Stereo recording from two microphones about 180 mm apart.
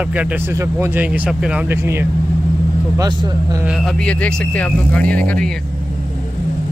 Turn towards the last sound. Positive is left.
turn(degrees=5)  # may be behind; listen again after turning